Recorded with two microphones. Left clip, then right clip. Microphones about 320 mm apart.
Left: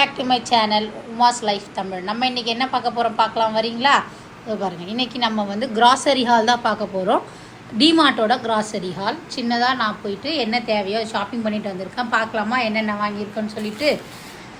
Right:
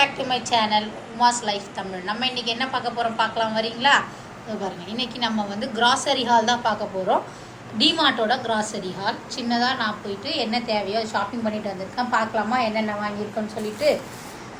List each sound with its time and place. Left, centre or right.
0.0 s a woman's voice: centre